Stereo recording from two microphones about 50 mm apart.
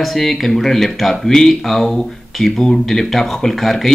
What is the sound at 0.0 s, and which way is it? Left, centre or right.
Speech, centre.